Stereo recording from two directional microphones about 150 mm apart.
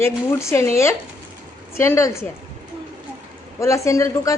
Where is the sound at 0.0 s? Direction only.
20° left (ahead or behind).